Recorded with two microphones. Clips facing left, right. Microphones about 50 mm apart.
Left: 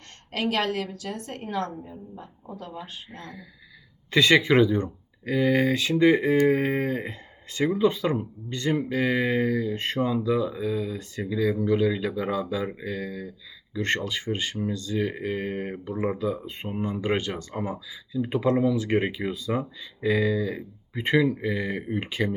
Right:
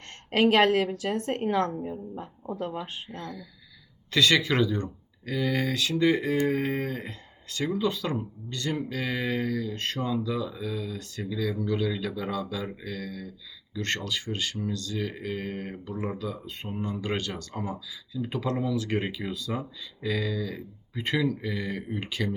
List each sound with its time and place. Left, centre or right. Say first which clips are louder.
0.3 s a woman's voice: right 6 dB; right
3.1 s speech: right 3 dB; left